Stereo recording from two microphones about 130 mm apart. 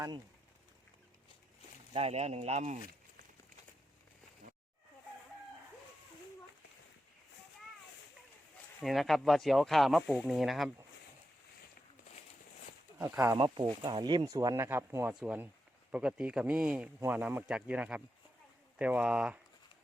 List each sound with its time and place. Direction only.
1.9 s speech: 50° right (ahead or behind)
8.8 s speech: centre (ahead or behind)
13.0 s speech: 20° right (ahead or behind)